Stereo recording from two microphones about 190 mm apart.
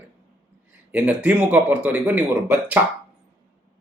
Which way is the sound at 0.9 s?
5° right (ahead or behind).